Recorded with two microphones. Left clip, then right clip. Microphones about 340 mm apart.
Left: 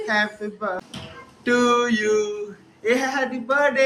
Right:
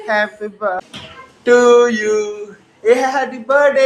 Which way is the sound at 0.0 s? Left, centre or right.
Centre.